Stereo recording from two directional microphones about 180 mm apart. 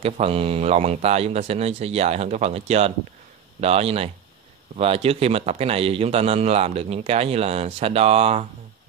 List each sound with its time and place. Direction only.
0.0 s speech: 35° right (ahead or behind)